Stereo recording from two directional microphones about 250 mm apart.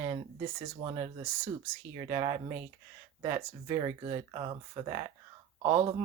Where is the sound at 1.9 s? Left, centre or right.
Centre.